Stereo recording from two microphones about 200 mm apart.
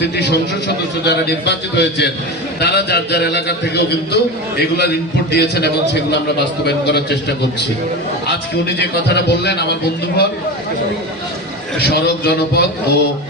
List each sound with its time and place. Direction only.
1.0 s a man's voice: 55° left (ahead or behind)
9.1 s a man's voice: 55° left (ahead or behind)
11.8 s a man's voice: 55° left (ahead or behind)